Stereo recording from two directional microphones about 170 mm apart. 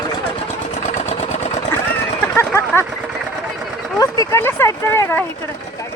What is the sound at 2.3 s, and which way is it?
Speech, 15° left (ahead or behind).